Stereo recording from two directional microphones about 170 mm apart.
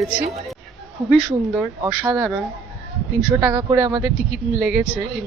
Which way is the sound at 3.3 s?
15° right (ahead or behind).